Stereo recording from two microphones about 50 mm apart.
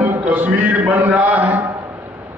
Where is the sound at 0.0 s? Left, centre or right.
Right.